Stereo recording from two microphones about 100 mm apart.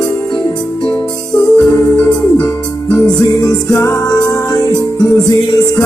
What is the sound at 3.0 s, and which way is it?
Music, 30° left (ahead or behind).